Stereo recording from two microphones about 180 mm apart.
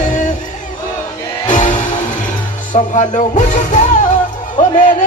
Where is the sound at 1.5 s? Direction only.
45° left (ahead or behind).